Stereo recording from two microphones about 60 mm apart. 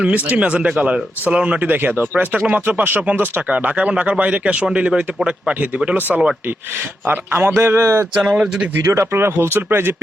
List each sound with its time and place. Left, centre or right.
0.0 s speech: right
7.0 s speech: right
7.8 s speech: right
8.1 s speech: centre
8.4 s speech: right
8.8 s speech: right
9.1 s speech: right